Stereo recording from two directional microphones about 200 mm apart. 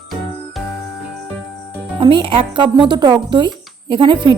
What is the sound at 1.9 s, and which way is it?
Speech, 25° right (ahead or behind).